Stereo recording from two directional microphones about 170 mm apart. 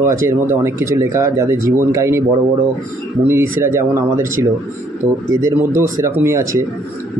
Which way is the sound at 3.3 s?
15° right (ahead or behind).